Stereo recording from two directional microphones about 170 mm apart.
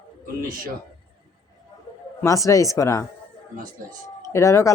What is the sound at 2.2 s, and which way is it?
Speech, 20° left (ahead or behind).